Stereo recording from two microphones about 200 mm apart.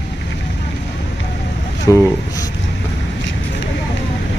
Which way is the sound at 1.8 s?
15° left (ahead or behind).